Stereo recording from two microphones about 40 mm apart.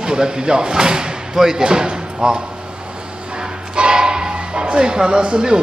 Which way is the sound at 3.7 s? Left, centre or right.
Right.